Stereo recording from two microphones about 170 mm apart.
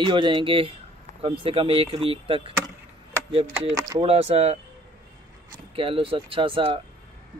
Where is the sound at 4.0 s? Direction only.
35° right (ahead or behind).